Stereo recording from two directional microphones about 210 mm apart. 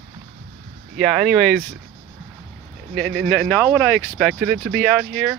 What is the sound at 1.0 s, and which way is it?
Speech, centre (ahead or behind).